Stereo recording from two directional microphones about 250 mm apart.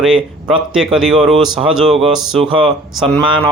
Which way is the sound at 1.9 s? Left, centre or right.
Right.